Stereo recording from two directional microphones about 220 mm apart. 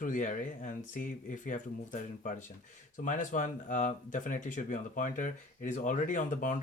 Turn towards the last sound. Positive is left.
turn(degrees=35)  # may be behind; listen again after turning